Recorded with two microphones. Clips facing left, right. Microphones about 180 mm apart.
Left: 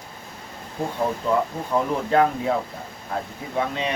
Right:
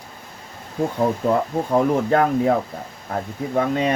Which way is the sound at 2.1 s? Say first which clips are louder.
Right 2 dB; 45° right (ahead or behind).